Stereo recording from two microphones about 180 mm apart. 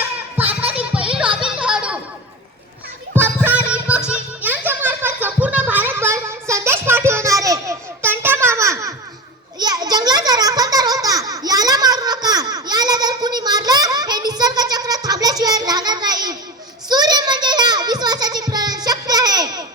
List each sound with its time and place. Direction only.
0.4 s a child's voice: 10° right (ahead or behind)
0.8 s music: 5° right (ahead or behind)
3.2 s a sound: 10° right (ahead or behind)
3.7 s music: 5° right (ahead or behind)
9.6 s a sound: 20° right (ahead or behind)
16.9 s music: 20° right (ahead or behind)